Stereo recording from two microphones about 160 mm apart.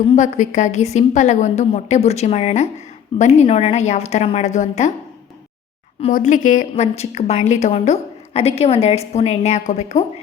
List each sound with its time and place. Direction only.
0.2 s a woman's voice: 50° left (ahead or behind)
6.1 s a woman's voice: 55° left (ahead or behind)